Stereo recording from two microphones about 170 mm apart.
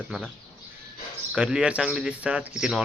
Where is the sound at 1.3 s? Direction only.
5° right (ahead or behind).